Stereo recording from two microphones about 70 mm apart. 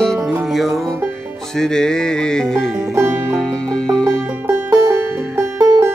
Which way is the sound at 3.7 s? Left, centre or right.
Centre.